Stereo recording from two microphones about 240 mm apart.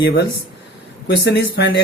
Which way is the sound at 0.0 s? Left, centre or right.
Left.